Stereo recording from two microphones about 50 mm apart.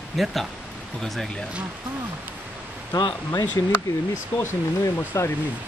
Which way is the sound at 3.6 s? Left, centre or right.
Left.